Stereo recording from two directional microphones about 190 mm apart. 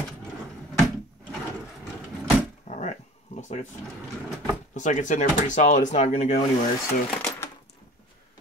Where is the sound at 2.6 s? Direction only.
40° left (ahead or behind).